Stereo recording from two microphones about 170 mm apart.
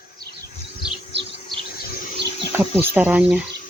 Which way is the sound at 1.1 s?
90° right.